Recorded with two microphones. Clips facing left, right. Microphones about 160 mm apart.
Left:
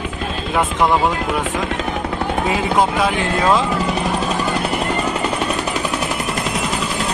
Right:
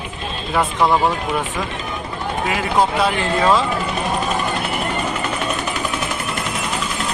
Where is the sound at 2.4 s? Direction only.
25° left (ahead or behind).